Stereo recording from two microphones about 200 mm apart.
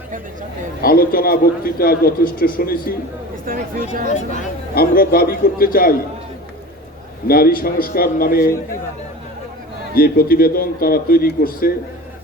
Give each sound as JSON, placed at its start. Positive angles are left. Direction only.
{"t": 0.8, "sound": "a man's voice", "side_deg": 45}
{"t": 3.4, "sound": "speech", "side_deg": -45}
{"t": 4.1, "sound": "a man's voice", "side_deg": 45}
{"t": 7.3, "sound": "a man's voice", "side_deg": 50}
{"t": 9.9, "sound": "a man's voice", "side_deg": 45}